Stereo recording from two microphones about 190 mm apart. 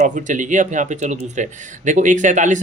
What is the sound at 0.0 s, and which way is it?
Speech, 40° right (ahead or behind).